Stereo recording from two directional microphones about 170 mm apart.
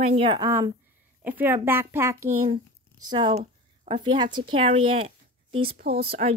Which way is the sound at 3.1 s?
30° right (ahead or behind).